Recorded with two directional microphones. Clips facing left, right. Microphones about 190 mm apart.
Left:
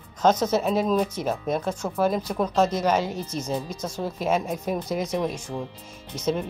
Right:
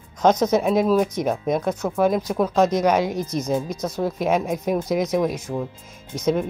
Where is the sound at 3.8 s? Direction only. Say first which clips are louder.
Right 5 dB; 10° left (ahead or behind).